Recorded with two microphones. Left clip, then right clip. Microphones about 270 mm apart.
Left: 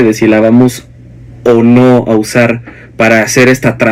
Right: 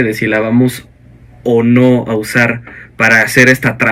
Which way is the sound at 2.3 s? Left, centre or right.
Left.